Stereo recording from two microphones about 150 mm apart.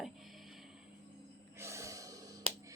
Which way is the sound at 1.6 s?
20° right (ahead or behind).